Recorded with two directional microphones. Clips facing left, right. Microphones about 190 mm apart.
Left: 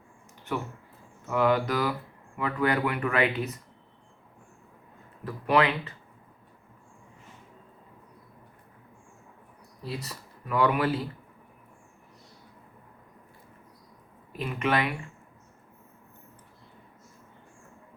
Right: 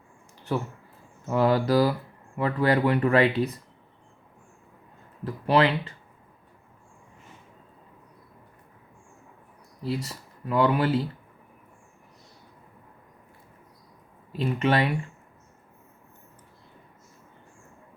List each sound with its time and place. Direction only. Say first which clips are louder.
1.3 s speech: right 3 dB; 35° right (ahead or behind)
5.2 s speech: right 2 dB; 30° right (ahead or behind)
9.8 s speech: right 6 dB; 30° right (ahead or behind)
14.3 s speech: right 4 dB; 30° right (ahead or behind)